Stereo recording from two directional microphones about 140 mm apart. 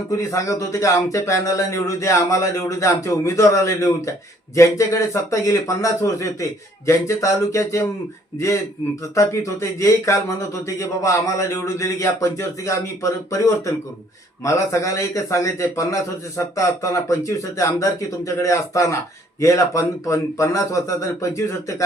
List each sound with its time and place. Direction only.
0.1 s speech: 20° left (ahead or behind)